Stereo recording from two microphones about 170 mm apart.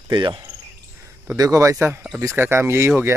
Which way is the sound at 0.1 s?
25° right (ahead or behind).